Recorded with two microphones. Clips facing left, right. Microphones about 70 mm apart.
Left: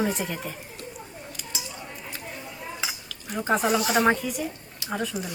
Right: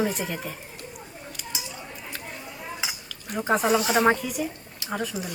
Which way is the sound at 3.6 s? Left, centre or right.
Right.